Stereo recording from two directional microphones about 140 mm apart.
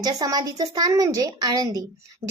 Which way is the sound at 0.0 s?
25° right (ahead or behind).